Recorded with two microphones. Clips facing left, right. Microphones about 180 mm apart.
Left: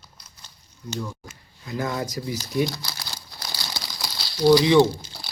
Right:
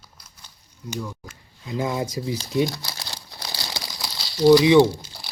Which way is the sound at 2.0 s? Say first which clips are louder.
Right 2 dB; 25° right (ahead or behind).